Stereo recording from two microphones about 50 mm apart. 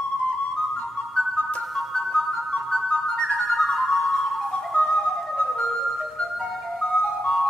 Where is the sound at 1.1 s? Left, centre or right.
Left.